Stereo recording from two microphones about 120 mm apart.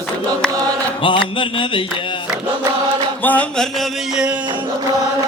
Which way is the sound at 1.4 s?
45° left (ahead or behind).